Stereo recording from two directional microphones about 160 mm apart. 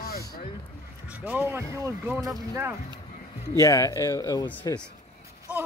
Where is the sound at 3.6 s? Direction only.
20° left (ahead or behind).